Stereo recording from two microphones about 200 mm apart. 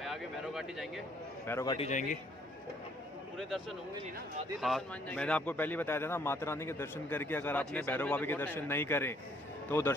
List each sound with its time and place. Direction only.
0.0 s a sound: centre (ahead or behind)
1.5 s a man's voice: 15° left (ahead or behind)
1.8 s a man's voice: 40° left (ahead or behind)
3.3 s a man's voice: centre (ahead or behind)